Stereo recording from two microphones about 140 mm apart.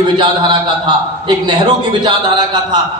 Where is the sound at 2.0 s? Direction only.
30° right (ahead or behind).